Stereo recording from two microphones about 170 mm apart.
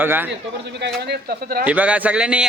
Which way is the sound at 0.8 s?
75° right (ahead or behind).